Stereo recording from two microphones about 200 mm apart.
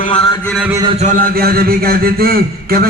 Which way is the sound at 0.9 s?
35° right (ahead or behind).